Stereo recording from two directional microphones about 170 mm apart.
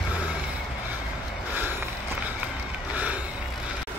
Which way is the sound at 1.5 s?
10° right (ahead or behind).